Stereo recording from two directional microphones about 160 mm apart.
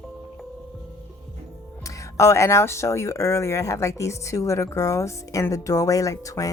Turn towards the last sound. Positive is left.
turn(degrees=20)  # may be behind; listen again after turning